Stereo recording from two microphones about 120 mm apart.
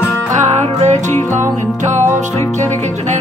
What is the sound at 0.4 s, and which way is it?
Music, 75° right (ahead or behind).